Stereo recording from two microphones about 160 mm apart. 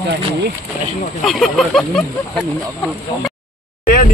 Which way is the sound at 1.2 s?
Centre (ahead or behind).